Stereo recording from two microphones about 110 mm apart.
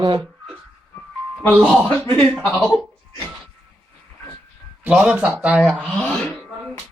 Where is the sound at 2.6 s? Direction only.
Centre (ahead or behind).